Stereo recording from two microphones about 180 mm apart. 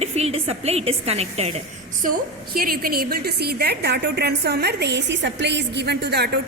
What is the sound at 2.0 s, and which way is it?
A woman's voice, 55° right (ahead or behind).